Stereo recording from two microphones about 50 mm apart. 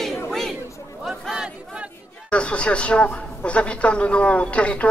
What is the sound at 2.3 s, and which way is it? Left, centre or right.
A woman's voice, left.